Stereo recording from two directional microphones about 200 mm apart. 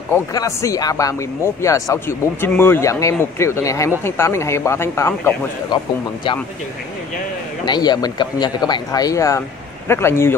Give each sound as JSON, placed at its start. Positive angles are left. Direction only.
{"t": 0.1, "sound": "speech", "side_deg": 15}
{"t": 7.6, "sound": "a man's voice", "side_deg": 20}